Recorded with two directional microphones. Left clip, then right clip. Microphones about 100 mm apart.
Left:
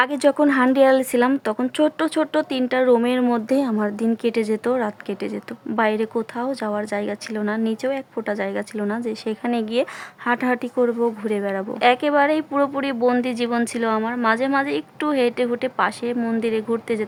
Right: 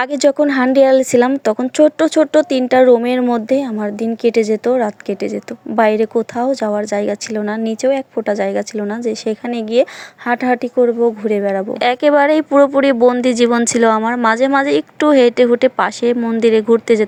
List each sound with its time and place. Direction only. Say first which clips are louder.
0.0 s a woman's voice: right 4 dB; 40° right (ahead or behind)
3.5 s a woman's voice: right 4 dB; 10° right (ahead or behind); by 11.6 s 25° right (ahead or behind)
11.8 s speech: right 5 dB; 50° right (ahead or behind)